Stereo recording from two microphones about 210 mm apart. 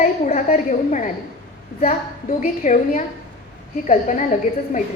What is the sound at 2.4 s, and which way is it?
Speech, 35° left (ahead or behind).